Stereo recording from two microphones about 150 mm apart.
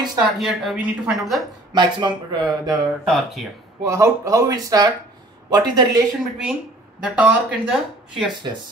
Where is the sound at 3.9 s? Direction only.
20° right (ahead or behind).